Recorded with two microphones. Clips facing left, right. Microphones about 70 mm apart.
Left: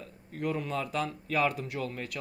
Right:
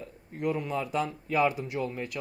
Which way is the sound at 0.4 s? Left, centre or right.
Centre.